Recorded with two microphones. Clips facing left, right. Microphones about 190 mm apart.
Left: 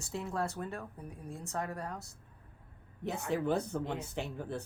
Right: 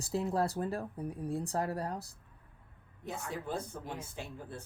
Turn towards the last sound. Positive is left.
turn(degrees=70)  # may be behind; listen again after turning